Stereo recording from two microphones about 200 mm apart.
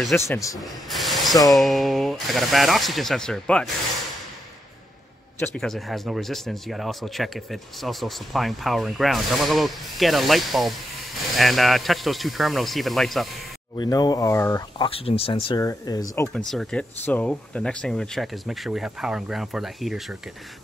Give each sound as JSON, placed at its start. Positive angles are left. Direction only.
{"t": 0.1, "sound": "speech", "side_deg": 15}
{"t": 0.6, "sound": "speech", "side_deg": 0}
{"t": 5.4, "sound": "speech", "side_deg": 5}
{"t": 13.7, "sound": "speech", "side_deg": 20}
{"t": 14.9, "sound": "speech", "side_deg": 30}
{"t": 15.6, "sound": "speech", "side_deg": 15}
{"t": 16.3, "sound": "speech", "side_deg": 5}